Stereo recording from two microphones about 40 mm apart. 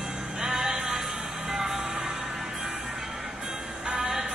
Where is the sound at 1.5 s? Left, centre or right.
Centre.